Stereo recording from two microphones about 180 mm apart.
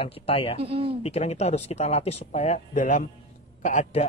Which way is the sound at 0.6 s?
30° right (ahead or behind).